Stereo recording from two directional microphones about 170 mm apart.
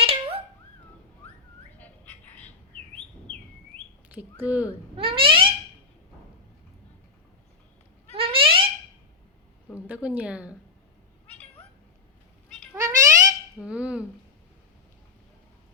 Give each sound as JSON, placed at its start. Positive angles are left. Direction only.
{"t": 0.0, "sound": "dog", "side_deg": -35}
{"t": 1.8, "sound": "bird", "side_deg": 10}
{"t": 4.1, "sound": "speech", "side_deg": -10}
{"t": 4.9, "sound": "a sound", "side_deg": -30}
{"t": 8.1, "sound": "a sound", "side_deg": -30}
{"t": 9.7, "sound": "speech", "side_deg": -10}
{"t": 12.7, "sound": "cat", "side_deg": -20}
{"t": 13.6, "sound": "speech", "side_deg": -5}